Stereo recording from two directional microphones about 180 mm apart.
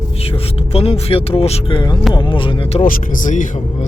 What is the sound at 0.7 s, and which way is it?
Speech, 35° left (ahead or behind).